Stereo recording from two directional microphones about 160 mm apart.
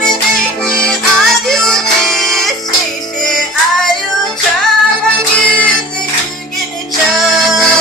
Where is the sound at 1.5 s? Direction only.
5° left (ahead or behind).